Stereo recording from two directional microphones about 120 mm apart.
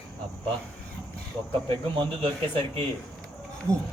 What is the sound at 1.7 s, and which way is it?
Speech, 45° right (ahead or behind).